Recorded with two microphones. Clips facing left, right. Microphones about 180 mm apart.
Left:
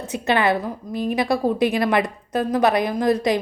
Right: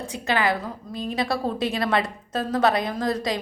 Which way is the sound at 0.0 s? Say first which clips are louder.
Left 4 dB; 20° left (ahead or behind).